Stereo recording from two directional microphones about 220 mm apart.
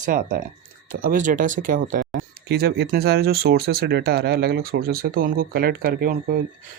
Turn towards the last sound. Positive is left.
turn(degrees=-40)  # may be behind; listen again after turning